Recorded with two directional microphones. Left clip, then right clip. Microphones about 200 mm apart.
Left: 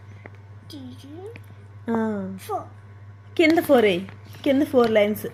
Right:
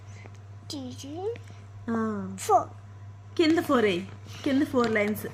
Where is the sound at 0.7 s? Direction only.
50° right (ahead or behind).